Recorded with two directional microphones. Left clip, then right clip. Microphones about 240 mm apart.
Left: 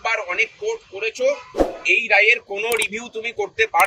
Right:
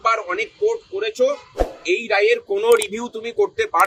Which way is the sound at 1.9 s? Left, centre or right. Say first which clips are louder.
Left 2 dB; centre.